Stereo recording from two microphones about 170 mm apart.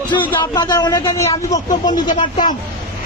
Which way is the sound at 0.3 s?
20° left (ahead or behind).